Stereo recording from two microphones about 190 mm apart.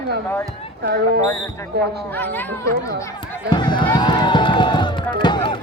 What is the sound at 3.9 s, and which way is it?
Music, 25° left (ahead or behind).